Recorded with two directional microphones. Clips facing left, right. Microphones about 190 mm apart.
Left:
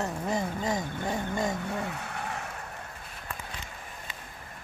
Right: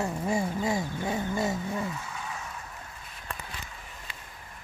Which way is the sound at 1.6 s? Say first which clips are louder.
Right 1 dB; 65° left (ahead or behind).